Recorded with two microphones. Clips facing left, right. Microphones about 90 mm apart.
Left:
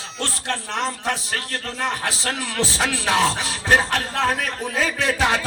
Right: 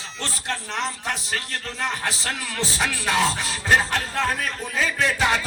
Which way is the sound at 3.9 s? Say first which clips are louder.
Left 3 dB; 65° left (ahead or behind).